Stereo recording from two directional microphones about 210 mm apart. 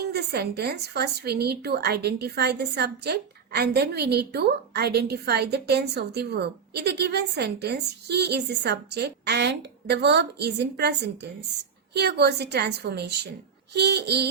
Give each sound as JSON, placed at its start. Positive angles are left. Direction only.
{"t": 0.0, "sound": "a woman's voice", "side_deg": -50}